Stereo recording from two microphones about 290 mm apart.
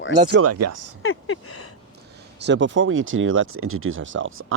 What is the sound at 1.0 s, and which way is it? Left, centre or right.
Speech, left.